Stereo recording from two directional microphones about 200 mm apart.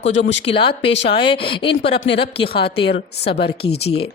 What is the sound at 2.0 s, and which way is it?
Speech, 55° left (ahead or behind).